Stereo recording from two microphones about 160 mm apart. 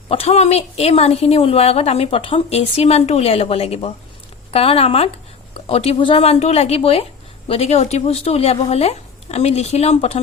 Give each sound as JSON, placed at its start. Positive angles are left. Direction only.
{"t": 0.1, "sound": "a woman's voice", "side_deg": 40}